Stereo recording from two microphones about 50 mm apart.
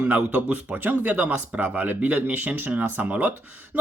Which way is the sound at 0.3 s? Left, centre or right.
Right.